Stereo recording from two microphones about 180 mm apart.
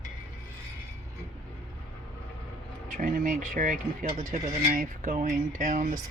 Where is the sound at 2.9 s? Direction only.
45° right (ahead or behind).